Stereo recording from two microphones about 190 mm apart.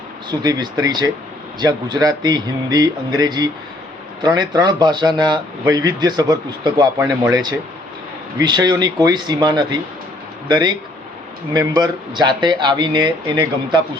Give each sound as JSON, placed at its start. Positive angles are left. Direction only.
{"t": 0.3, "sound": "speech", "side_deg": -20}